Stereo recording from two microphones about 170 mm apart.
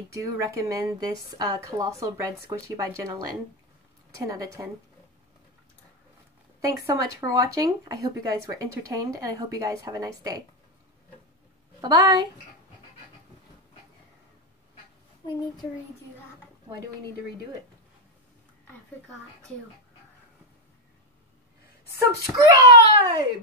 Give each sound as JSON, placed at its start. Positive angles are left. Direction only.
{"t": 0.1, "sound": "speech", "side_deg": -15}
{"t": 6.6, "sound": "speech", "side_deg": -20}
{"t": 11.8, "sound": "speech", "side_deg": -20}
{"t": 21.9, "sound": "speech", "side_deg": -20}